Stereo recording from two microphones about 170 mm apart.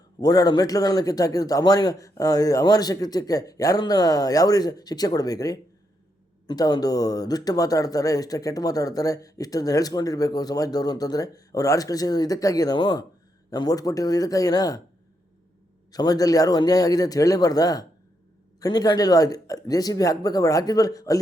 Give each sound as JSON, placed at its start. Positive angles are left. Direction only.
{"t": 0.2, "sound": "speech", "side_deg": 25}
{"t": 15.9, "sound": "speech", "side_deg": 20}